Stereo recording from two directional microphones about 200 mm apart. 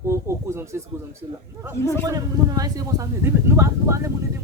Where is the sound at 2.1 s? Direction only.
20° right (ahead or behind).